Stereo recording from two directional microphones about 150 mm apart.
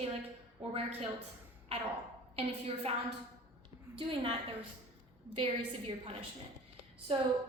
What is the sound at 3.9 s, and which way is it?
Speech, 35° right (ahead or behind).